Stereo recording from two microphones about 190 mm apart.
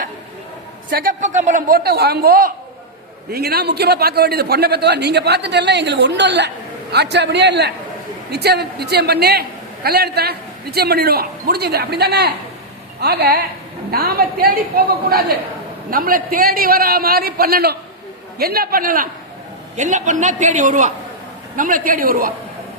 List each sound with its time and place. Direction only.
0.9 s a man's voice: 50° right (ahead or behind)